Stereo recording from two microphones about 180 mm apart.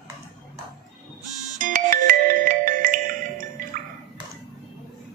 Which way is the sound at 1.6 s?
50° right (ahead or behind).